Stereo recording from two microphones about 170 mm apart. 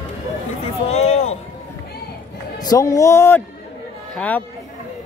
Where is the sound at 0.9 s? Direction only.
35° left (ahead or behind).